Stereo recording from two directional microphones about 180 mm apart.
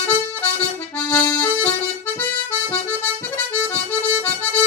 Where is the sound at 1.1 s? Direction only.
5° left (ahead or behind).